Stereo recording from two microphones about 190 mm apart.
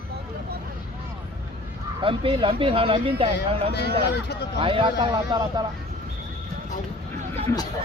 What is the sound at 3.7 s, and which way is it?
Speech, 60° left (ahead or behind).